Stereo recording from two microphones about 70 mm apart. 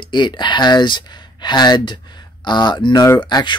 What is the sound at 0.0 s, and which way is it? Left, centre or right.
Speech, left.